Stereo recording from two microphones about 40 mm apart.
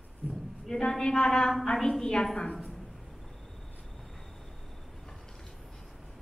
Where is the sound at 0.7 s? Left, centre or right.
Centre.